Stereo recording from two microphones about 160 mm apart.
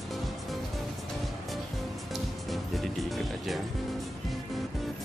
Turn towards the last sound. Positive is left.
turn(degrees=0)  # may be behind; listen again after turning